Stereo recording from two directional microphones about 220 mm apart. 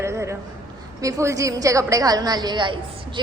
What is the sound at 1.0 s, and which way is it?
A woman's voice, 15° right (ahead or behind).